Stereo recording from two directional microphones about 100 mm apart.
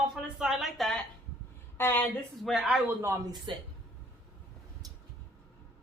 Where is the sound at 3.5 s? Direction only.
55° right (ahead or behind).